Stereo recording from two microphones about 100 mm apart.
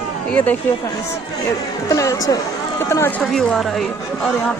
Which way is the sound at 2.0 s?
35° left (ahead or behind).